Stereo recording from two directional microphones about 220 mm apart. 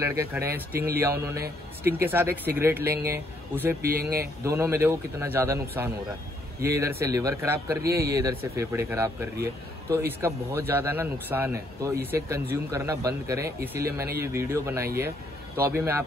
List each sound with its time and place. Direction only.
0.0 s a man's voice: 10° right (ahead or behind)
0.7 s speech: 45° right (ahead or behind)
1.0 s a man's voice: 10° right (ahead or behind)
3.9 s speech: 45° right (ahead or behind)
4.5 s a man's voice: 10° right (ahead or behind)